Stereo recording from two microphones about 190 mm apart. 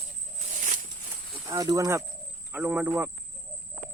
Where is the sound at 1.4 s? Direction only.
20° right (ahead or behind).